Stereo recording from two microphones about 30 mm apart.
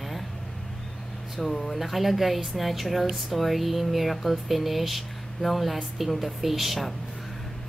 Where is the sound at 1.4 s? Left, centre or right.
Centre.